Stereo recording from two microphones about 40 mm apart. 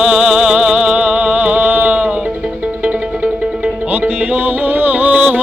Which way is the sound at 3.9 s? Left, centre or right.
Right.